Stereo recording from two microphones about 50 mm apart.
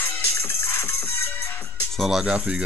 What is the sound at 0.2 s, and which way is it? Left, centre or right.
Music, left.